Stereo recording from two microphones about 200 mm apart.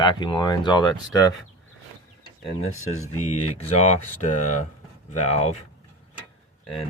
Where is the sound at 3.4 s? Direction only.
30° left (ahead or behind).